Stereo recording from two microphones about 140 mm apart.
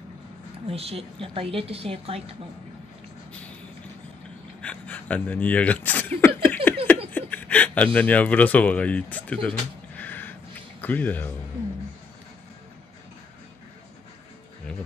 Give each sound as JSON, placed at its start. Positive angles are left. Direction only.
{"t": 0.7, "sound": "a woman's voice", "side_deg": -45}
{"t": 4.6, "sound": "speech", "side_deg": 10}